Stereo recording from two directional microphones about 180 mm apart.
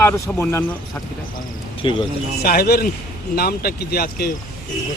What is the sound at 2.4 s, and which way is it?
Speech, 55° left (ahead or behind).